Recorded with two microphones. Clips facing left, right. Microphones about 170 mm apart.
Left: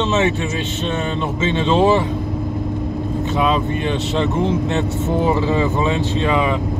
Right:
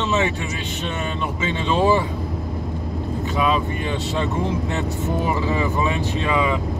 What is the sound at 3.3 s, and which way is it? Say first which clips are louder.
Speech: left 2 dB; 25° left (ahead or behind).